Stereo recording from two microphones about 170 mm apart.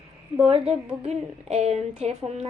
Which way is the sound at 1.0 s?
40° right (ahead or behind).